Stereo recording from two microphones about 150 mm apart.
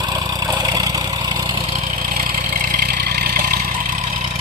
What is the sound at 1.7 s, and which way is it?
Vehicle, 65° right (ahead or behind).